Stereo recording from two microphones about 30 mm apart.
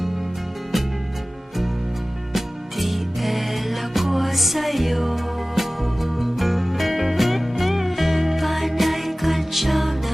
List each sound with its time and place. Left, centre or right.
2.3 s music: centre